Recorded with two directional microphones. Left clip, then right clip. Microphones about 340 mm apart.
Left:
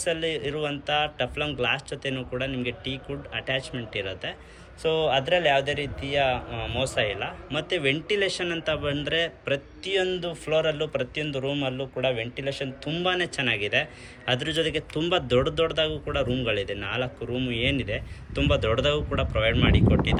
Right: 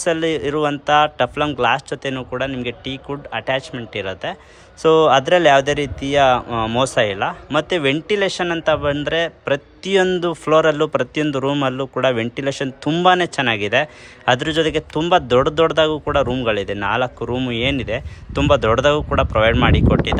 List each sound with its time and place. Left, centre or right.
0.0 s a man's voice: centre
5.3 s a man's voice: right
6.7 s a man's voice: centre
11.8 s a man's voice: right
12.5 s a man's voice: centre